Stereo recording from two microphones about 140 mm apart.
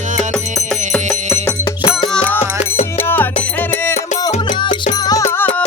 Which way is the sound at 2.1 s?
10° left (ahead or behind).